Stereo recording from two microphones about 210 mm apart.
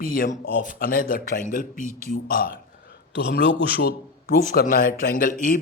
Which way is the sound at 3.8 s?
45° left (ahead or behind).